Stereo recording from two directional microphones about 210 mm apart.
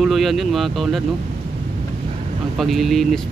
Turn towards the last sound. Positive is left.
turn(degrees=0)  # may be behind; listen again after turning